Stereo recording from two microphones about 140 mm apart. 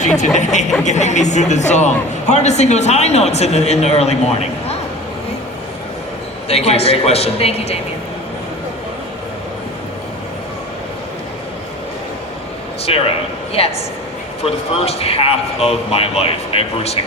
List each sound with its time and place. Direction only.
0.3 s speech: 55° left (ahead or behind)
6.5 s speech: 50° left (ahead or behind)
12.9 s speech: 40° left (ahead or behind)